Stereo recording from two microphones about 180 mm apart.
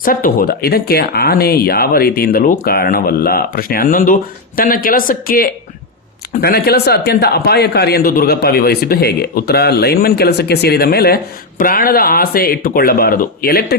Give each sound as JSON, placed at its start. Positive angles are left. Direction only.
{"t": 0.0, "sound": "speech", "side_deg": 55}